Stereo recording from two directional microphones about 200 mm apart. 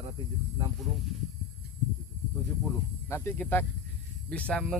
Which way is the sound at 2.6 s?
10° left (ahead or behind).